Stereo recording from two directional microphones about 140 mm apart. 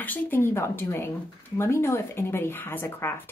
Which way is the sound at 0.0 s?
15° left (ahead or behind).